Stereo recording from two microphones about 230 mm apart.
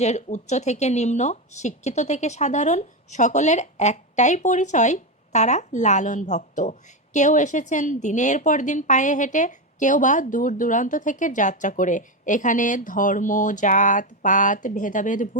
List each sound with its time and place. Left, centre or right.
0.0 s speech: left